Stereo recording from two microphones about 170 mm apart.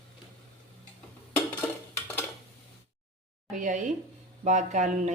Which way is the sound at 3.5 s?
50° right (ahead or behind).